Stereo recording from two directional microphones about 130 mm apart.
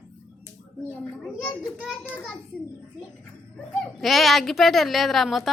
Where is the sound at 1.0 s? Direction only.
10° left (ahead or behind).